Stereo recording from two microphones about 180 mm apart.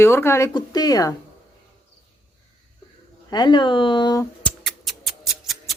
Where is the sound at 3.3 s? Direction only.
25° left (ahead or behind).